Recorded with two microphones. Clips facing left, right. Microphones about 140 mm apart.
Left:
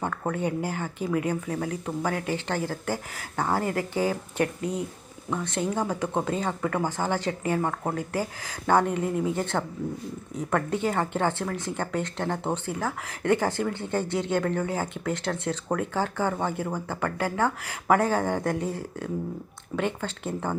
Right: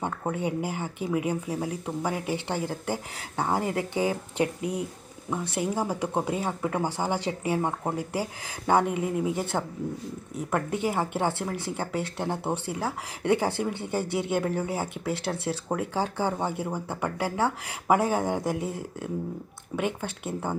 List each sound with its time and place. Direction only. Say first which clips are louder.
0.0 s speech: left 1 dB; 15° right (ahead or behind)